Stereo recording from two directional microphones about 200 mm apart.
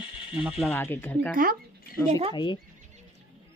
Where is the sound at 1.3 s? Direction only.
45° right (ahead or behind).